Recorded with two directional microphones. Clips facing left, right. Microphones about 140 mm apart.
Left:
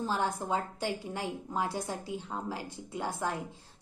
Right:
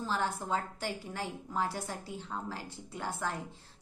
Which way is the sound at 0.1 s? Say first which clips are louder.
Even; 15° left (ahead or behind).